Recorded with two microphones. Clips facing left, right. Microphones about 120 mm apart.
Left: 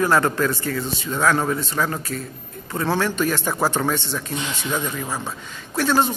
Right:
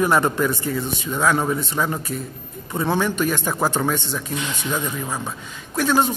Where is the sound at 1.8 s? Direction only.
20° right (ahead or behind).